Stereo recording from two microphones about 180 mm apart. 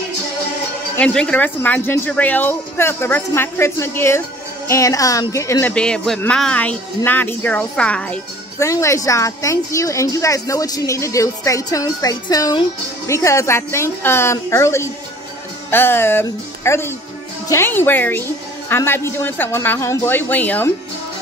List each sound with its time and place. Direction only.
0.9 s speech: 5° left (ahead or behind)